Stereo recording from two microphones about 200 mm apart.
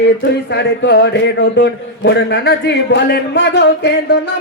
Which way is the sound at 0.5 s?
60° left (ahead or behind).